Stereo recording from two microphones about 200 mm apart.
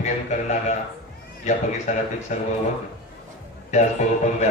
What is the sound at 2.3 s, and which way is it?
Speech, 35° left (ahead or behind).